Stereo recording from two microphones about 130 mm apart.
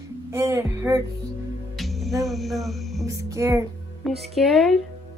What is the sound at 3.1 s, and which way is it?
Music, 25° right (ahead or behind).